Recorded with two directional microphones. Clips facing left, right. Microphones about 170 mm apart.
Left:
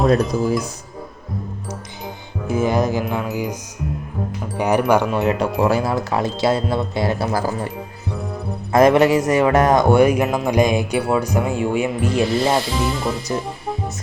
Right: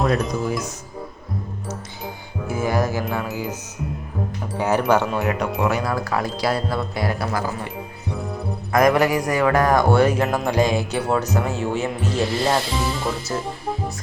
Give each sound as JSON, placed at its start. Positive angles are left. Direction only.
{"t": 0.0, "sound": "speech", "side_deg": 0}
{"t": 2.5, "sound": "speech", "side_deg": 20}
{"t": 4.5, "sound": "speech", "side_deg": 15}
{"t": 5.4, "sound": "speech", "side_deg": 35}
{"t": 5.9, "sound": "speech", "side_deg": 25}
{"t": 8.7, "sound": "speech", "side_deg": 25}
{"t": 12.2, "sound": "speech", "side_deg": 0}
{"t": 13.3, "sound": "music", "side_deg": 0}